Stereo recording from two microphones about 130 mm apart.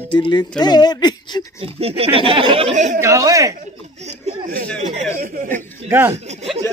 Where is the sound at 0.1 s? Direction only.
40° left (ahead or behind).